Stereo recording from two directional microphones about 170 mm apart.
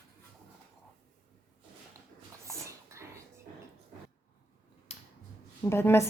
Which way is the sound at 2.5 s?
15° right (ahead or behind).